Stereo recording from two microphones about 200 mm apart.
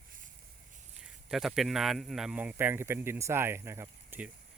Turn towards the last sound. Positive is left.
turn(degrees=-10)  # may be behind; listen again after turning